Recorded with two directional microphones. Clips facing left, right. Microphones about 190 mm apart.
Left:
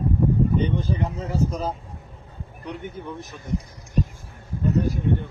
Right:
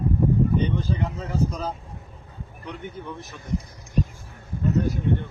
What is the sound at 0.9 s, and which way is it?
Speech, 15° left (ahead or behind).